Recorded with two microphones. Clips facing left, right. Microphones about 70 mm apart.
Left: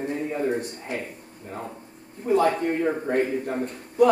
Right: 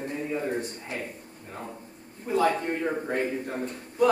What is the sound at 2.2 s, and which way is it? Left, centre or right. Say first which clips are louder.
Speech: left 3 dB; left.